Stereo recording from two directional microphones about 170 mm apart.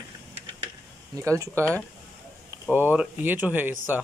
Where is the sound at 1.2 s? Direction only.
20° right (ahead or behind).